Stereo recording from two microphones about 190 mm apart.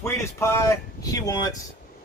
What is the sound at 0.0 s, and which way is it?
Speech, 15° left (ahead or behind).